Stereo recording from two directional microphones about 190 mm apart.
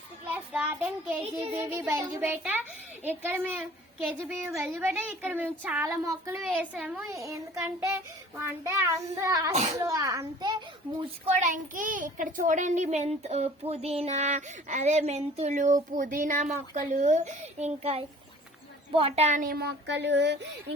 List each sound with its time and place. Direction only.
0.3 s speech: 10° right (ahead or behind)
9.5 s a child's voice: 35° right (ahead or behind)
9.8 s a child's voice: 20° right (ahead or behind)
11.3 s a child's voice: 40° right (ahead or behind); by 20.7 s 65° right (ahead or behind)